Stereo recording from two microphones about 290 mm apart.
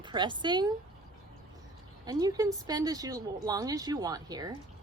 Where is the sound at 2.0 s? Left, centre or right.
Centre.